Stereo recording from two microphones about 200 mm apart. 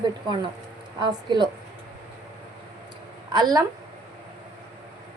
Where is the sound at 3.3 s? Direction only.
20° right (ahead or behind).